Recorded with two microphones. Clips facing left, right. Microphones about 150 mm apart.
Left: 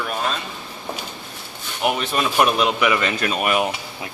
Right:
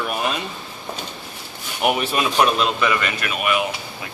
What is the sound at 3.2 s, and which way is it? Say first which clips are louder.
Speech: left 2 dB; 35° left (ahead or behind).